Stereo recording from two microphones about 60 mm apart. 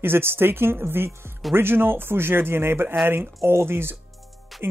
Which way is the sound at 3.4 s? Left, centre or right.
Right.